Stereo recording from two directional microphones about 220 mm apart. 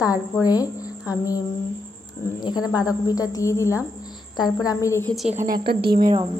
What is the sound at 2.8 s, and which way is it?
A woman's voice, 15° left (ahead or behind).